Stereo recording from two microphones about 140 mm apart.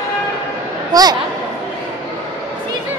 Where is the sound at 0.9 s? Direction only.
25° right (ahead or behind).